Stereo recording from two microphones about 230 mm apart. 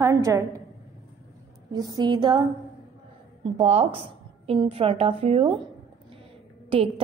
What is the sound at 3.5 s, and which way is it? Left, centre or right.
A woman's voice, right.